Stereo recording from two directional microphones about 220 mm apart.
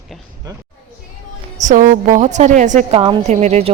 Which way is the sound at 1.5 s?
35° right (ahead or behind).